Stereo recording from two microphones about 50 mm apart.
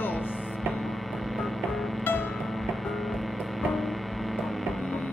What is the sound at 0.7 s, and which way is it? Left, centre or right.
Music, centre.